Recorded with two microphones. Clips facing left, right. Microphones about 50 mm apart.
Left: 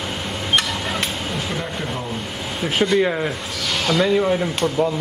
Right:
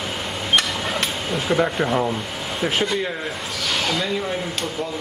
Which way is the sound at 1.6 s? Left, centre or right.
Right.